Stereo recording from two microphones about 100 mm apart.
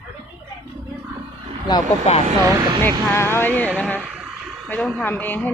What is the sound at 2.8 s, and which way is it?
Speech, 25° left (ahead or behind).